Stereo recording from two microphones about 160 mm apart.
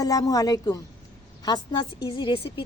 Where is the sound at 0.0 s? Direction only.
20° left (ahead or behind).